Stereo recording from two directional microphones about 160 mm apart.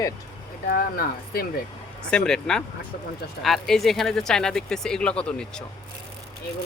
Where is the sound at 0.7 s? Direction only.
65° left (ahead or behind).